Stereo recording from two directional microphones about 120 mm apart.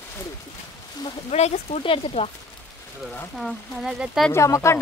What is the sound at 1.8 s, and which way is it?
Speech, 50° left (ahead or behind).